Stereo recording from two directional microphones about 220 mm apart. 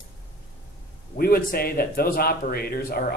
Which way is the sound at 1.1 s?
40° left (ahead or behind).